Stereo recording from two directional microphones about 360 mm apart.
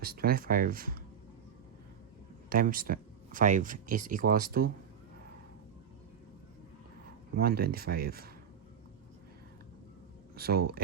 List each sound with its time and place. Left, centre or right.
0.0 s speech: right
2.5 s speech: right
7.3 s speech: right
10.3 s speech: right